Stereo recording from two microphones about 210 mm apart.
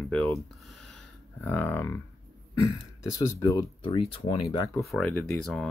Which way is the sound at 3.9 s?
30° left (ahead or behind).